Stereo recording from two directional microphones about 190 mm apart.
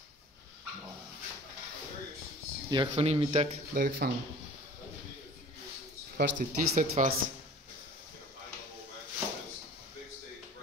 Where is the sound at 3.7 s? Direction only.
50° right (ahead or behind).